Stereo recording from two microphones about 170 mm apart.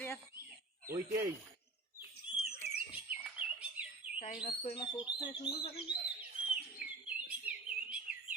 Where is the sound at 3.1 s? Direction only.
10° right (ahead or behind).